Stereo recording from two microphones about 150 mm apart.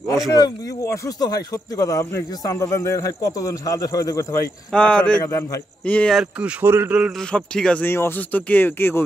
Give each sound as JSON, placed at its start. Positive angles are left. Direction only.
{"t": 0.3, "sound": "speech", "side_deg": 25}
{"t": 4.7, "sound": "speech", "side_deg": 5}
{"t": 5.2, "sound": "speech", "side_deg": 20}
{"t": 5.9, "sound": "speech", "side_deg": 5}
{"t": 6.4, "sound": "a man's voice", "side_deg": -15}
{"t": 7.2, "sound": "speech", "side_deg": 5}